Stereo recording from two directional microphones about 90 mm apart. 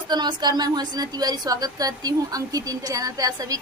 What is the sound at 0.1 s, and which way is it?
A woman's voice, 50° right (ahead or behind).